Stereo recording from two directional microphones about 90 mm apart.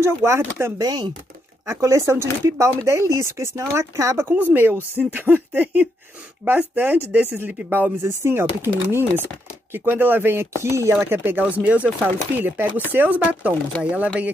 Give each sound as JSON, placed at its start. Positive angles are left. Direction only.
{"t": 0.0, "sound": "speech", "side_deg": -30}
{"t": 0.7, "sound": "speech", "side_deg": -45}
{"t": 1.7, "sound": "speech", "side_deg": -35}
{"t": 4.3, "sound": "speech", "side_deg": -20}
{"t": 11.1, "sound": "speech", "side_deg": -20}